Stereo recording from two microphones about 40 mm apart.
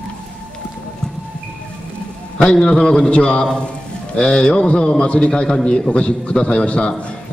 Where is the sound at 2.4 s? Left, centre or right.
Left.